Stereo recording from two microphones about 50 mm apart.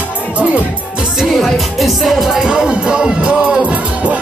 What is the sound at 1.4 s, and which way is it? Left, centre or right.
Music, centre.